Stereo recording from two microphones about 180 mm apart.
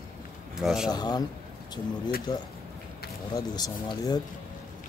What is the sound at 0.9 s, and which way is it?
Speech, 20° left (ahead or behind).